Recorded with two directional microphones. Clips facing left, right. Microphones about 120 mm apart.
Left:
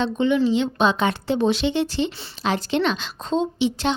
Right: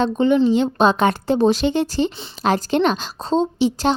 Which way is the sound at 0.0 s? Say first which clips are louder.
Right 4 dB; 40° right (ahead or behind).